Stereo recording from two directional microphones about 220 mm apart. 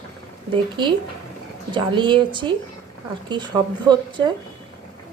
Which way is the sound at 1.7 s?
20° right (ahead or behind).